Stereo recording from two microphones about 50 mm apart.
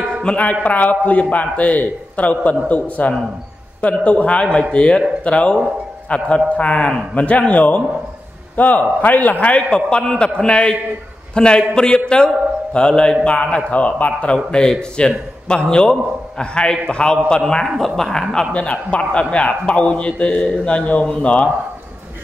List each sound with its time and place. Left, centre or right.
0.3 s speech: centre
0.7 s a man's voice: left
9.7 s a man's voice: centre
17.7 s a man's voice: centre
18.5 s speech: left